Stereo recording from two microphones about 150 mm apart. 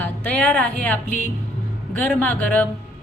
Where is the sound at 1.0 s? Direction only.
55° left (ahead or behind).